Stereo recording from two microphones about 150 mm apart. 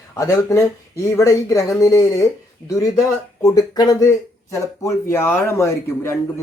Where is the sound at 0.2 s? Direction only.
20° left (ahead or behind).